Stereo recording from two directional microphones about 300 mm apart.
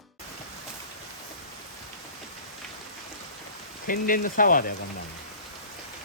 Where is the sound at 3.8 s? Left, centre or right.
Left.